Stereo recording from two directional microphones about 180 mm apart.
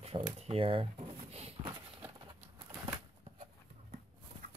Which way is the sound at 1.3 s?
35° right (ahead or behind).